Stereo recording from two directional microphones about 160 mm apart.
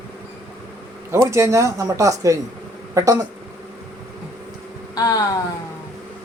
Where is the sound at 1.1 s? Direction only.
20° right (ahead or behind).